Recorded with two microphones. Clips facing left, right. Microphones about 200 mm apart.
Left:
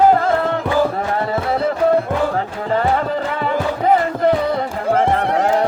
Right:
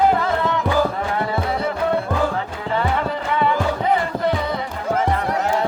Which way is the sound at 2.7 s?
40° left (ahead or behind).